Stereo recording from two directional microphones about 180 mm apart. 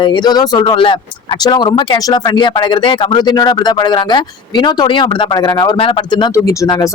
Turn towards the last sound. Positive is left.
turn(degrees=20)  # may be behind; listen again after turning